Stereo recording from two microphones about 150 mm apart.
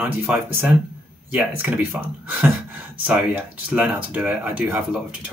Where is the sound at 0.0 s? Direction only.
15° right (ahead or behind).